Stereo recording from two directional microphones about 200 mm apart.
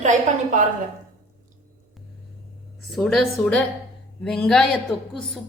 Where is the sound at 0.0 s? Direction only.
40° right (ahead or behind).